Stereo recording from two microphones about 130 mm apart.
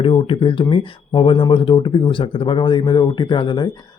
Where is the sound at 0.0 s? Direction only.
45° left (ahead or behind).